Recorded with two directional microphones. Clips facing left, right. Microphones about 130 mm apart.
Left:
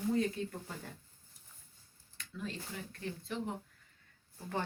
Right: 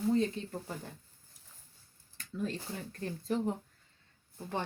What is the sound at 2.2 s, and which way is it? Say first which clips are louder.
Speech: right 6 dB; 40° right (ahead or behind).